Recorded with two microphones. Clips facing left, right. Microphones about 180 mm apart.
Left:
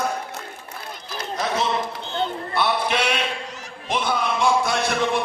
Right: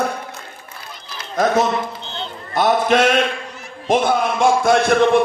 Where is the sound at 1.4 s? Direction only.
45° right (ahead or behind).